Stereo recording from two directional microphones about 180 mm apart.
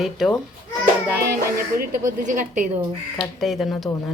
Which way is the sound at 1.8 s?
45° right (ahead or behind).